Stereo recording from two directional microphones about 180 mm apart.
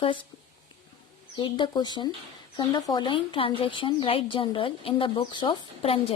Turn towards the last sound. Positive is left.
turn(degrees=30)  # may be behind; listen again after turning